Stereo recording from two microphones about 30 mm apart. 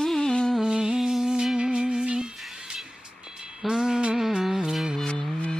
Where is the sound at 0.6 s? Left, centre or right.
Right.